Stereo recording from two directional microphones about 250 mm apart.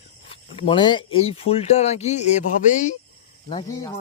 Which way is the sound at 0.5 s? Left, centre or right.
Left.